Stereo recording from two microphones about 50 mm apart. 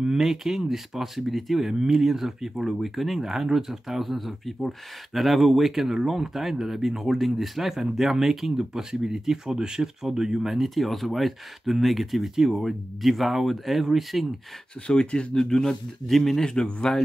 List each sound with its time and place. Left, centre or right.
0.0 s speech: centre
14.9 s speech: centre
15.3 s a man's voice: centre